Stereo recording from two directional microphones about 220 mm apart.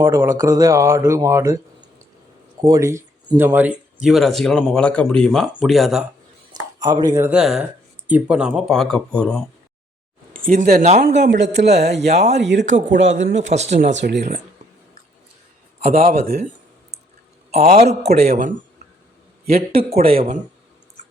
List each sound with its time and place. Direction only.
0.0 s speech: 15° right (ahead or behind)
6.6 s speech: 15° right (ahead or behind); by 9.4 s 5° left (ahead or behind)
10.3 s speech: 40° right (ahead or behind)
11.1 s a man's voice: 55° right (ahead or behind)
11.8 s a man's voice: 30° right (ahead or behind)
12.3 s a man's voice: 55° right (ahead or behind)
13.5 s speech: 30° right (ahead or behind)
13.8 s a man's voice: 50° right (ahead or behind)
15.9 s a man's voice: 40° right (ahead or behind)
17.5 s a man's voice: 30° right (ahead or behind)
18.0 s a man's voice: 45° right (ahead or behind)
20.1 s a man's voice: 25° right (ahead or behind)